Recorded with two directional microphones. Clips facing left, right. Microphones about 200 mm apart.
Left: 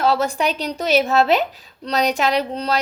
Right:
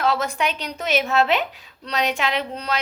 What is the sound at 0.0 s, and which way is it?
A woman's voice, 35° left (ahead or behind).